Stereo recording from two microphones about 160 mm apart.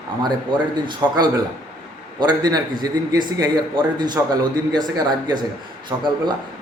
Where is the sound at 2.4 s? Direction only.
25° right (ahead or behind).